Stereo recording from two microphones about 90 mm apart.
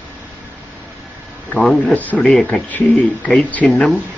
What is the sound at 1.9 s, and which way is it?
Speech, 15° left (ahead or behind).